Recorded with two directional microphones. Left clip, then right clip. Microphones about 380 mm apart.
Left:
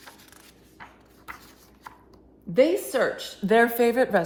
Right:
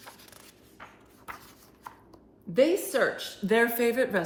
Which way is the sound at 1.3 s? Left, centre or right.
Centre.